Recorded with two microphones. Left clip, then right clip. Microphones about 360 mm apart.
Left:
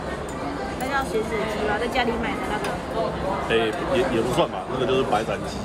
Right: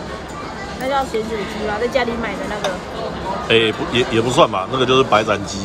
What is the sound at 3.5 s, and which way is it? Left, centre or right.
Speech, centre.